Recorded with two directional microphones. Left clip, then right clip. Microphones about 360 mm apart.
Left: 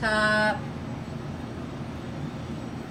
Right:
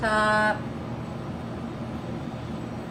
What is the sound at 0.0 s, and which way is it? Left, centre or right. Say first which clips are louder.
Vehicle: right 1 dB; centre.